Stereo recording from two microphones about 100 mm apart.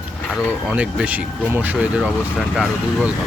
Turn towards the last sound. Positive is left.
turn(degrees=0)  # may be behind; listen again after turning